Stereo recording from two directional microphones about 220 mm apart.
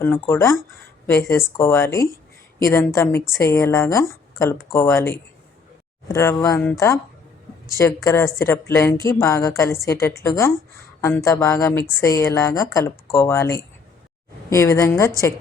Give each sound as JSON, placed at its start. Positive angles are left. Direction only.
{"t": 0.0, "sound": "speech", "side_deg": 10}